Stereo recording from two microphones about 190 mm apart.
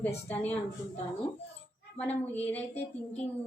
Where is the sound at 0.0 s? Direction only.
10° left (ahead or behind).